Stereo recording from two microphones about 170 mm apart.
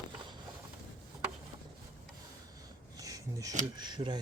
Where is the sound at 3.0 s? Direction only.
20° right (ahead or behind).